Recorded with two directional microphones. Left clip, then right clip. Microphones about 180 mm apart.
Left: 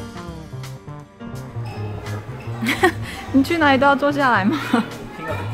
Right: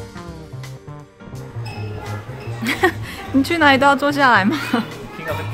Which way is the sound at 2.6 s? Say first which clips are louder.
Even; centre (ahead or behind).